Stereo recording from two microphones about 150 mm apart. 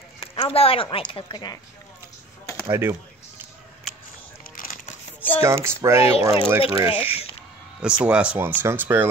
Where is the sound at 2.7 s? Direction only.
15° right (ahead or behind).